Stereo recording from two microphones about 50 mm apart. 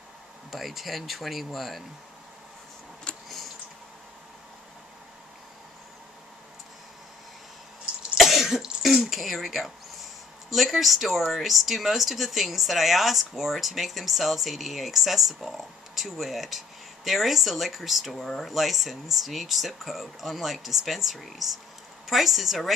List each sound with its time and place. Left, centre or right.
0.5 s speech: centre
3.1 s a sound: centre
8.1 s throat clearing: centre
10.5 s speech: centre
18.2 s speech: centre
18.5 s speech: centre